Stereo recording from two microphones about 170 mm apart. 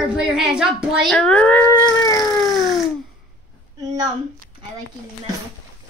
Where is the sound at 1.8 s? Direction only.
25° left (ahead or behind).